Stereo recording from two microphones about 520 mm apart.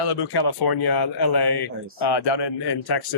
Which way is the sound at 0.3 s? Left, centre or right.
Left.